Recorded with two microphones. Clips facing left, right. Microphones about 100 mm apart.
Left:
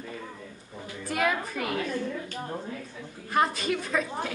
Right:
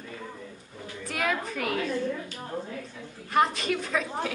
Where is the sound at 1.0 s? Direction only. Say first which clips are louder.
Left 2 dB; 5° left (ahead or behind).